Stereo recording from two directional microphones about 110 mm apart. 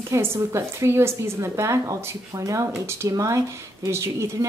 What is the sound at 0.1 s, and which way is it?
A woman's voice, 25° right (ahead or behind).